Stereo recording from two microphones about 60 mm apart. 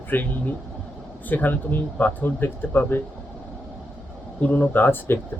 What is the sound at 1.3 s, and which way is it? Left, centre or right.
Speech, left.